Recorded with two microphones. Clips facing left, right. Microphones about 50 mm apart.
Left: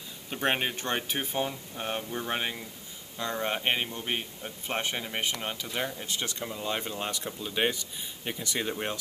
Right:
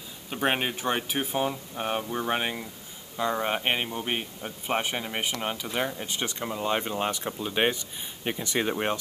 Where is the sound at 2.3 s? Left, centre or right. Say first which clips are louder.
Right 3 dB; centre.